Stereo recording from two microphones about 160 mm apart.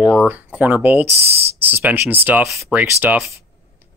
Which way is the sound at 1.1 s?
40° right (ahead or behind).